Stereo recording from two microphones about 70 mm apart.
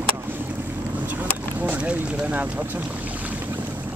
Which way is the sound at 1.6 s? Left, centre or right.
Centre.